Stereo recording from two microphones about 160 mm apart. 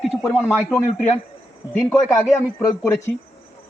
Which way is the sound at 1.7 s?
15° left (ahead or behind).